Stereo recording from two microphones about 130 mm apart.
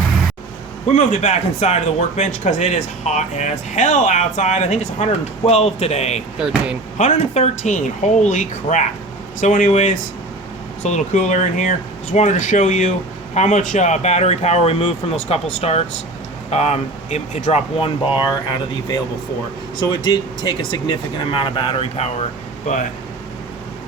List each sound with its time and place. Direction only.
0.9 s speech: 60° left (ahead or behind)
6.4 s speech: 5° right (ahead or behind)
7.0 s speech: 60° left (ahead or behind)
17.7 s speech: 45° left (ahead or behind)
19.9 s speech: 35° left (ahead or behind); by 22.1 s 50° left (ahead or behind)